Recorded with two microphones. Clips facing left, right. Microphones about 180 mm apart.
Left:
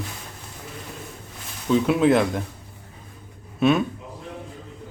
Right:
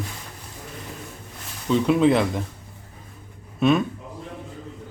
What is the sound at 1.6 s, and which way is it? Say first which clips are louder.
Speech: even; 5° left (ahead or behind).